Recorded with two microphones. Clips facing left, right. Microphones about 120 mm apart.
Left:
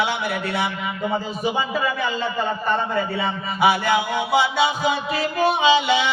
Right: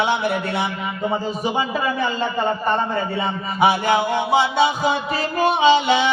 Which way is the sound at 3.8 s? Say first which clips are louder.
Right 2 dB; 50° right (ahead or behind).